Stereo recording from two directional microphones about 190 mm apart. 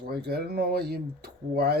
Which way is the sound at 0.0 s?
55° right (ahead or behind).